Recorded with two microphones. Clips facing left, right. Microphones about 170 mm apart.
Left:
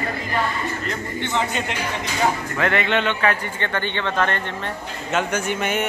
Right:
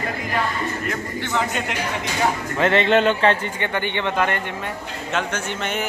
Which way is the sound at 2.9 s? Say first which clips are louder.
Right 4 dB; 35° right (ahead or behind).